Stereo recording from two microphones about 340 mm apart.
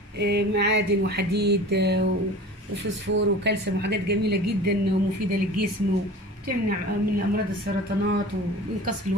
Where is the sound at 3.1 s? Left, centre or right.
Right.